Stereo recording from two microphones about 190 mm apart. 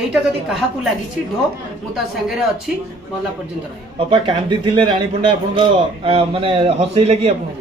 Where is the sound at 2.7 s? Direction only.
5° right (ahead or behind).